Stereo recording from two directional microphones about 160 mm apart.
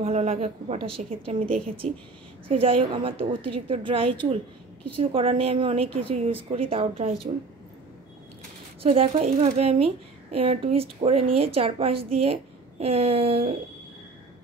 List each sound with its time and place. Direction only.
0.0 s speech: 45° right (ahead or behind)
8.8 s speech: 40° right (ahead or behind)